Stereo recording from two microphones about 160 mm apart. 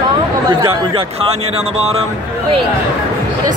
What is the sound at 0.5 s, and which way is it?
Speech, 20° right (ahead or behind).